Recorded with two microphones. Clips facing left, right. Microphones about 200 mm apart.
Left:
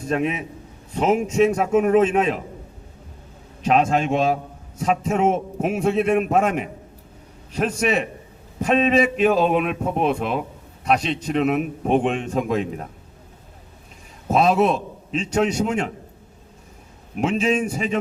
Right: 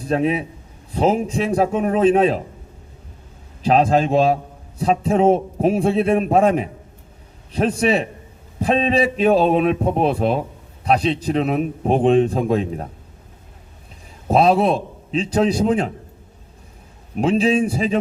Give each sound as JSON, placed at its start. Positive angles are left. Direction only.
{"t": 0.0, "sound": "a man's voice", "side_deg": -35}
{"t": 3.6, "sound": "a man's voice", "side_deg": -35}
{"t": 14.3, "sound": "a man's voice", "side_deg": -30}
{"t": 17.2, "sound": "a man's voice", "side_deg": -35}